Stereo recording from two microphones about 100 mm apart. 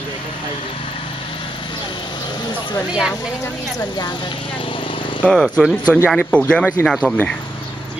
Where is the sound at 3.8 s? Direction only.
45° left (ahead or behind).